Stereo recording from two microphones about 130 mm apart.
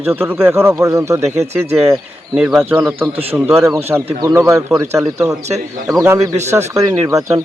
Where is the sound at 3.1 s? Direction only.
50° right (ahead or behind).